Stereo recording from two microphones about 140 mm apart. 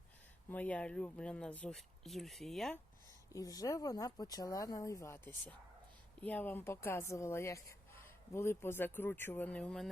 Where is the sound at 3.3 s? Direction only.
25° left (ahead or behind).